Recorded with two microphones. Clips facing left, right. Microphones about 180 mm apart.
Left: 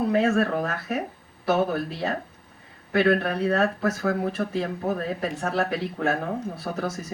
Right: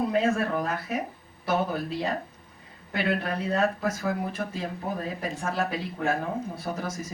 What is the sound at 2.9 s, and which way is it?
Speech, 65° left (ahead or behind).